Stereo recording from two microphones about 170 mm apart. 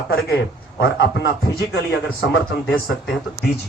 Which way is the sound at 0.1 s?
65° left (ahead or behind).